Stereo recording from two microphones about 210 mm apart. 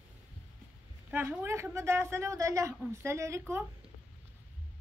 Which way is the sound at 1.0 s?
10° right (ahead or behind).